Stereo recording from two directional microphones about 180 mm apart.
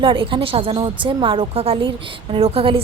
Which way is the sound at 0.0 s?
30° right (ahead or behind).